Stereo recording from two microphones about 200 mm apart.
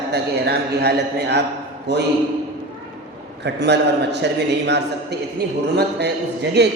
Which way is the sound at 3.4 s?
60° right (ahead or behind).